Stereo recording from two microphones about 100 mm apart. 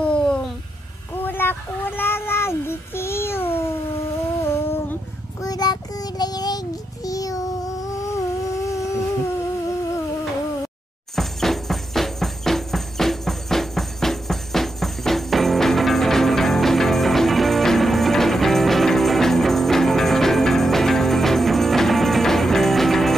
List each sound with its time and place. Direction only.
0.0 s a sound: 10° left (ahead or behind)
1.1 s child singing: 20° left (ahead or behind)
4.4 s humming: 25° left (ahead or behind)
5.4 s child singing: 40° left (ahead or behind)
11.1 s music: 5° left (ahead or behind)